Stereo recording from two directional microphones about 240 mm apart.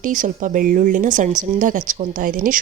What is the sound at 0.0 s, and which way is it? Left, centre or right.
Speech, right.